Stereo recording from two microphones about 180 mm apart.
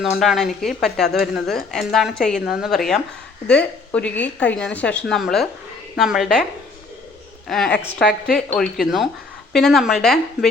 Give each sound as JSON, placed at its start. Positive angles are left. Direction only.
{"t": 0.0, "sound": "a woman's voice", "side_deg": 0}
{"t": 7.4, "sound": "a woman's voice", "side_deg": 0}